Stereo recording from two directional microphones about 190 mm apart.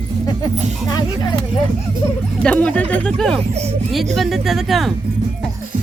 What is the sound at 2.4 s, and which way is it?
Speech, 5° left (ahead or behind).